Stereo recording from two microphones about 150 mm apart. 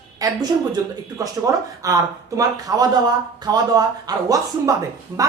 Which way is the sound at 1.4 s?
20° right (ahead or behind).